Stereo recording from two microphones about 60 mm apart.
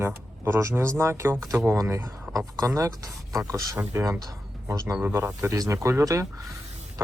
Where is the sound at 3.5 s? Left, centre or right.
Right.